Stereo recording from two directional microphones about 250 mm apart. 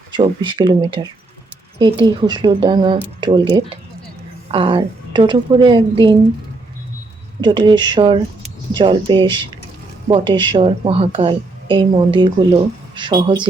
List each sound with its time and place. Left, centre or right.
0.1 s a woman's voice: centre
7.4 s a woman's voice: centre